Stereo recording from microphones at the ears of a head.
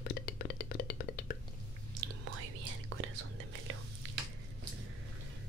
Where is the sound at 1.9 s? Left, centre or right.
Right.